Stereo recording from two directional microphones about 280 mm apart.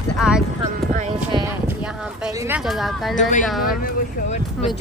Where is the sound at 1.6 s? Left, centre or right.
Centre.